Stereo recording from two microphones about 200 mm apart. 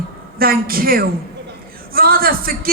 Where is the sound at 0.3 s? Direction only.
45° right (ahead or behind).